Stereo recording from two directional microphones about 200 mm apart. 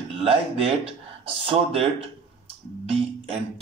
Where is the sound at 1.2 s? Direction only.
25° right (ahead or behind).